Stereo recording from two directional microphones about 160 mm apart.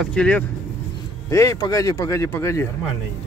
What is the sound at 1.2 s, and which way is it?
Speech, 20° left (ahead or behind).